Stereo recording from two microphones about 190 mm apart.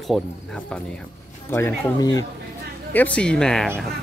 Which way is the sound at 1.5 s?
15° left (ahead or behind).